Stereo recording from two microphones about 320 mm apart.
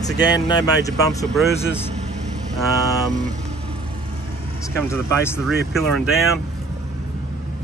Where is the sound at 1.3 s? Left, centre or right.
Centre.